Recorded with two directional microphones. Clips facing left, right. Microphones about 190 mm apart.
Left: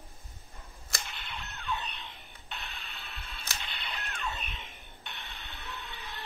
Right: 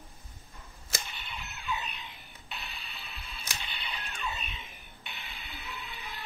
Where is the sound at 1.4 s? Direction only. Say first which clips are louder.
Even; 10° right (ahead or behind).